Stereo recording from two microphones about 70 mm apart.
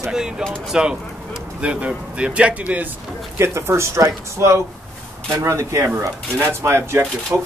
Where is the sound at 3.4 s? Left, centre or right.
Right.